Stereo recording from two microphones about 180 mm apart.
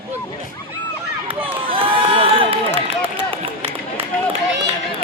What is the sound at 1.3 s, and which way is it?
Run, 30° right (ahead or behind).